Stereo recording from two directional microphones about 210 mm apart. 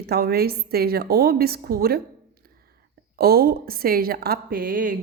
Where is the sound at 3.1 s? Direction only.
45° right (ahead or behind).